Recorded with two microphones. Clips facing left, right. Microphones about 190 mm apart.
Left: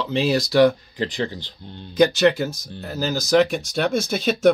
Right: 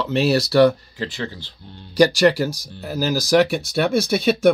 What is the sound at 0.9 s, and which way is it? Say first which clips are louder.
Speech: left 3 dB; 20° left (ahead or behind).